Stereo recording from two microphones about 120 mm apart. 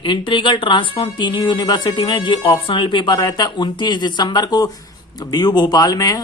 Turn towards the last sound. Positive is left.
turn(degrees=30)  # may be behind; listen again after turning